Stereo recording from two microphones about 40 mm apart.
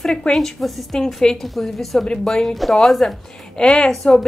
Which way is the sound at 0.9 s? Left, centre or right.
Centre.